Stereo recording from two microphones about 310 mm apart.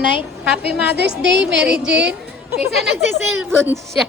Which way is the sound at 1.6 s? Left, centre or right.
Centre.